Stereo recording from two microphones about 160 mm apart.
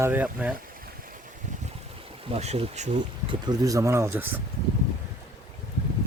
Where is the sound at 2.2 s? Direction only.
40° right (ahead or behind).